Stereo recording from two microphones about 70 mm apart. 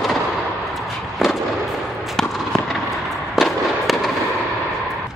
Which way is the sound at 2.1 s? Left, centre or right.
Centre.